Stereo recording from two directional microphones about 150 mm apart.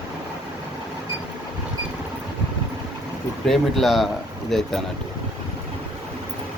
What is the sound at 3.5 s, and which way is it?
Speech, centre (ahead or behind).